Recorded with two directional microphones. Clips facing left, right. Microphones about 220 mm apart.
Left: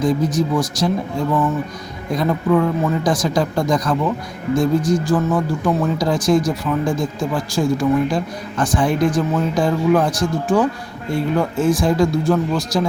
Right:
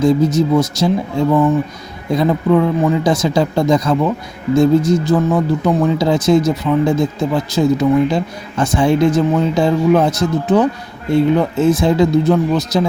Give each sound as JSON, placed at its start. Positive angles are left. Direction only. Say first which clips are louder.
{"t": 0.0, "sound": "speech", "louder": "right 5 dB", "side_deg": -25}
{"t": 2.1, "sound": "speech", "louder": "right 3 dB", "side_deg": -20}